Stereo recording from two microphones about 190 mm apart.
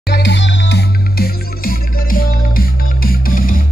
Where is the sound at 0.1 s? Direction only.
65° left (ahead or behind).